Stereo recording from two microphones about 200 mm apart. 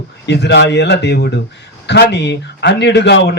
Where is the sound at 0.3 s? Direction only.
60° left (ahead or behind).